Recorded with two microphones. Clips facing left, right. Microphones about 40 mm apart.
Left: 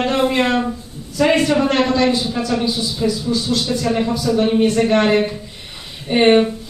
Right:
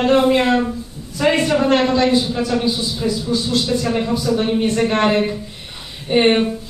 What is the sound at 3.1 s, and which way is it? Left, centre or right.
A man's voice, right.